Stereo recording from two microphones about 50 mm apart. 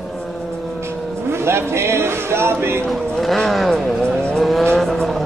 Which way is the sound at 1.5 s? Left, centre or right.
Right.